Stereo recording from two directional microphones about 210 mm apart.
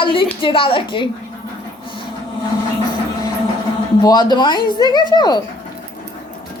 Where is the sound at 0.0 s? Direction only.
25° left (ahead or behind).